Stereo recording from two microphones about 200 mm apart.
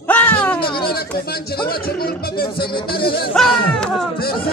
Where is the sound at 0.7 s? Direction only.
50° left (ahead or behind).